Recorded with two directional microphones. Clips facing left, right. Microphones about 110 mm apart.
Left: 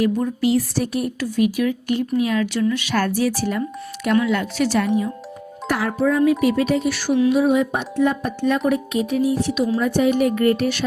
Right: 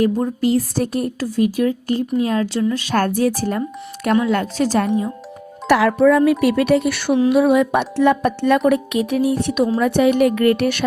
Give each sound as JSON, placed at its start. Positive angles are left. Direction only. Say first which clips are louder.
{"t": 0.0, "sound": "speech", "louder": "right 2 dB", "side_deg": -40}
{"t": 5.6, "sound": "speech", "louder": "right 7 dB", "side_deg": -90}